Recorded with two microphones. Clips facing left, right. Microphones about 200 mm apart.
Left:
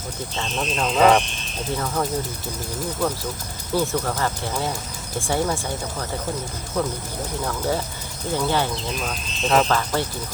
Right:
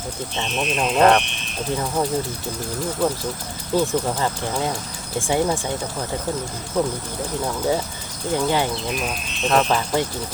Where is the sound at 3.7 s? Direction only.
15° right (ahead or behind).